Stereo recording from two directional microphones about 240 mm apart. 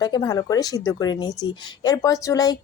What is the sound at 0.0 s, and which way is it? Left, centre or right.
Speech, centre.